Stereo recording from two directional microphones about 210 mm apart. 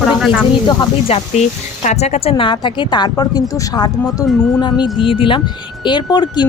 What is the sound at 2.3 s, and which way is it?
Speech, 20° left (ahead or behind).